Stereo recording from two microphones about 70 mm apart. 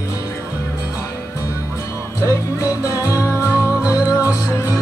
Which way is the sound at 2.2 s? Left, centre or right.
Left.